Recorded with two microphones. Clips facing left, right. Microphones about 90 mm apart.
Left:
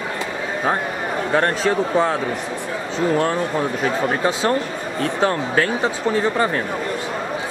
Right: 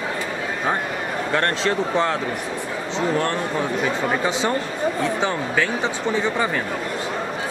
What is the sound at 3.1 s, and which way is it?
Speech, centre (ahead or behind).